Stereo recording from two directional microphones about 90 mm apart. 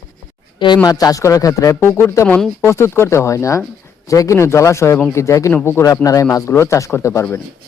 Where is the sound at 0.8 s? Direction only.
45° left (ahead or behind); by 5.8 s 25° left (ahead or behind).